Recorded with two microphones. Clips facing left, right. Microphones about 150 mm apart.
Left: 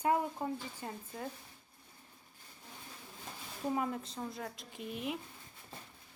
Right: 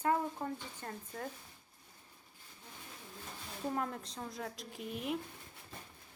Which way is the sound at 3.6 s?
5° left (ahead or behind).